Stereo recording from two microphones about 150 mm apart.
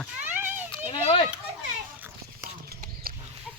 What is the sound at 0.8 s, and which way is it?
Children playing, 35° left (ahead or behind).